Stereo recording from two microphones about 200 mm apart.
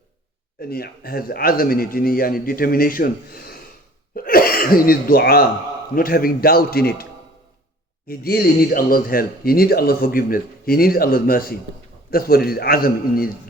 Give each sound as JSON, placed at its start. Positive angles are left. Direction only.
{"t": 0.6, "sound": "speech", "side_deg": 50}